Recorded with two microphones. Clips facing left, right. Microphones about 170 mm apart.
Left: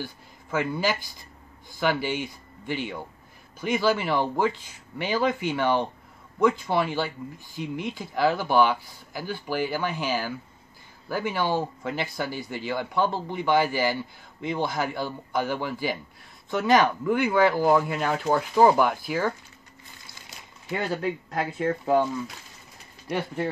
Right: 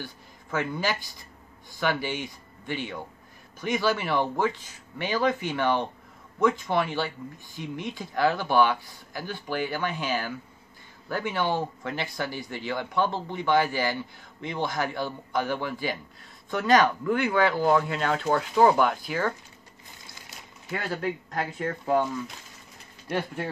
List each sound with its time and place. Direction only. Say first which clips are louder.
0.5 s speech: left 2 dB; 10° left (ahead or behind)
20.7 s speech: left 2 dB; 15° left (ahead or behind)
23.0 s speech: left 1 dB; 10° left (ahead or behind)